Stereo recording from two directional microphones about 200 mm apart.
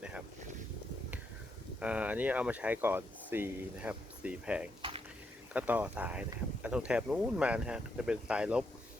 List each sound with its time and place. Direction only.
1.8 s speech: 5° right (ahead or behind)
4.8 s a sound: 25° right (ahead or behind)
5.5 s speech: 5° right (ahead or behind)